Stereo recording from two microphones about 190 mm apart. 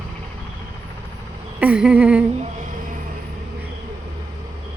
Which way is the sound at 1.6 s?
5° right (ahead or behind).